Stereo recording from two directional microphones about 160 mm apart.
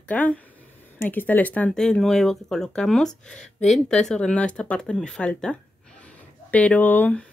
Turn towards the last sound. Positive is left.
turn(degrees=10)  # may be behind; listen again after turning